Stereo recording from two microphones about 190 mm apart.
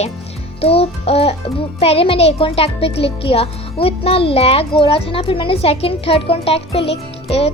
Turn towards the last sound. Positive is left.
turn(degrees=30)  # may be behind; listen again after turning